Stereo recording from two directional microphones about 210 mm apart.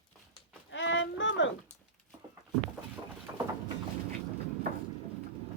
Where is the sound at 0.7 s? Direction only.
60° left (ahead or behind).